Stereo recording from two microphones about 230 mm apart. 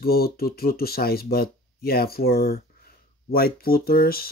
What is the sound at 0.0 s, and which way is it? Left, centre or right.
Speech, left.